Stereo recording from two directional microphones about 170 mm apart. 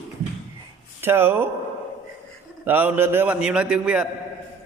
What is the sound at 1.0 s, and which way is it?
Speech, 15° right (ahead or behind).